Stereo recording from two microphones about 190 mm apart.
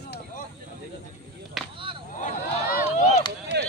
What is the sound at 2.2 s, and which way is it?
Speech, 45° left (ahead or behind).